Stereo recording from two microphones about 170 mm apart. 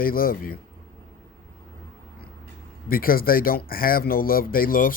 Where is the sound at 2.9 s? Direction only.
60° left (ahead or behind).